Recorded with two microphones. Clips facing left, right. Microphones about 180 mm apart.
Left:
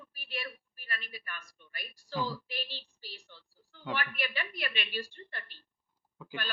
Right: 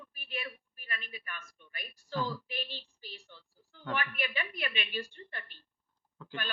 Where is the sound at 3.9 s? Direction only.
35° left (ahead or behind).